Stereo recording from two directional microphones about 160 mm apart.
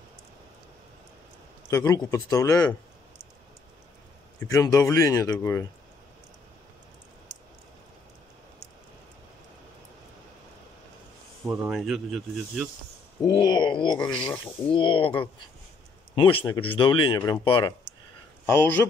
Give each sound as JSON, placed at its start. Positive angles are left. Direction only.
{"t": 1.7, "sound": "speech", "side_deg": 20}
{"t": 4.4, "sound": "speech", "side_deg": 20}
{"t": 11.4, "sound": "speech", "side_deg": -5}
{"t": 13.3, "sound": "speech", "side_deg": 30}
{"t": 18.5, "sound": "speech", "side_deg": 15}